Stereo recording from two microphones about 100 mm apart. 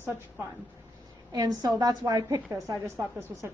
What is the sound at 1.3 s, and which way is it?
A woman's voice, 40° right (ahead or behind).